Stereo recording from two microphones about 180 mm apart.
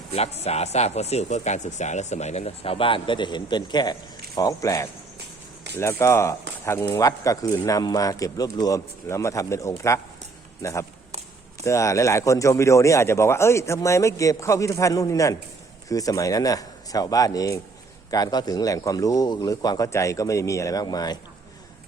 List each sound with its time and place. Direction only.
0.1 s speech: 35° left (ahead or behind)